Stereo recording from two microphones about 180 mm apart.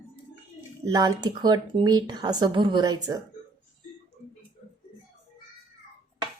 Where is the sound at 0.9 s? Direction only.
20° right (ahead or behind).